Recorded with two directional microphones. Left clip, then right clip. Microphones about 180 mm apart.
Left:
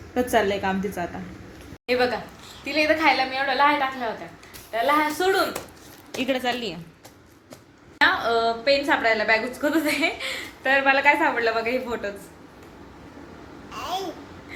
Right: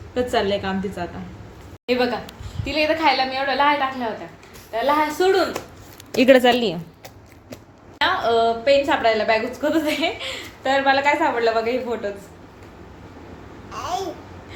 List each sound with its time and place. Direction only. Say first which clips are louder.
0.1 s a woman's voice: right 1 dB; 15° left (ahead or behind)
1.9 s a woman's voice: right 1 dB; centre (ahead or behind)
6.1 s speech: right 11 dB; 45° right (ahead or behind)
7.9 s a woman's voice: right 2 dB; centre (ahead or behind)
13.7 s babbling: right 3 dB; centre (ahead or behind)